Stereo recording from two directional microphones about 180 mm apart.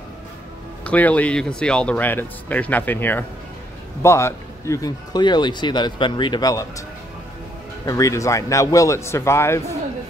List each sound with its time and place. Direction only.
0.8 s a man's voice: 10° left (ahead or behind)
7.8 s speech: 20° left (ahead or behind)